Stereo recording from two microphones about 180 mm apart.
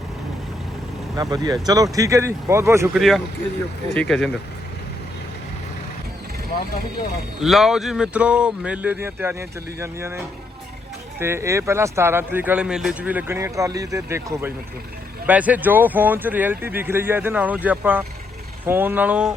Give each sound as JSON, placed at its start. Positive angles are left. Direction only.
{"t": 1.1, "sound": "speech", "side_deg": -20}
{"t": 2.9, "sound": "speech", "side_deg": 0}
{"t": 7.4, "sound": "speech", "side_deg": 0}